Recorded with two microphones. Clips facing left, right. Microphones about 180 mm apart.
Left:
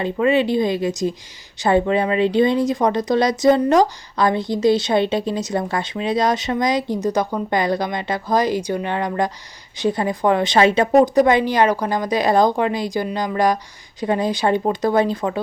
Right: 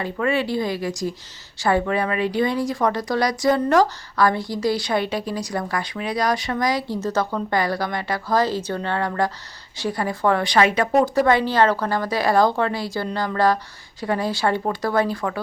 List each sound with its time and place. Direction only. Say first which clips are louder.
0.0 s a woman's voice: left 5 dB; 20° left (ahead or behind)